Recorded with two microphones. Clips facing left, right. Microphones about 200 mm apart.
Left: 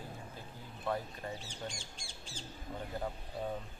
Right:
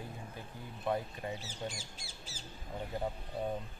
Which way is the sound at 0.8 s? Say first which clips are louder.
Right 2 dB; 20° right (ahead or behind).